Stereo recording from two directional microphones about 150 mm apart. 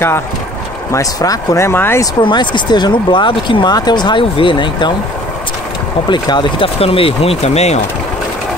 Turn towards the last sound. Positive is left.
turn(degrees=45)  # may be behind; listen again after turning